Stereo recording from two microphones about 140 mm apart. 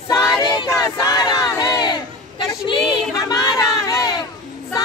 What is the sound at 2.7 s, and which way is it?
Crowd, 30° left (ahead or behind).